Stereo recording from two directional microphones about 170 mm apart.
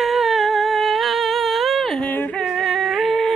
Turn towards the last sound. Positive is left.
turn(degrees=0)  # may be behind; listen again after turning